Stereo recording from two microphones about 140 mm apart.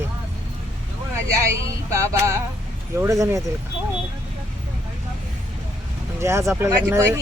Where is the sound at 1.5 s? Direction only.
20° right (ahead or behind).